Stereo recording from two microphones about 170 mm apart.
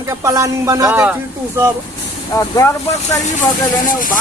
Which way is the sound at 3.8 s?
55° left (ahead or behind).